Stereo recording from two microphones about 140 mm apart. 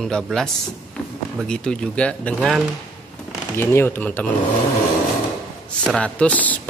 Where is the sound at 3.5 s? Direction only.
15° left (ahead or behind).